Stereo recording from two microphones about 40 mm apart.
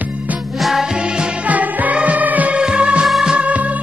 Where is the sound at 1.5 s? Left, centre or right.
Right.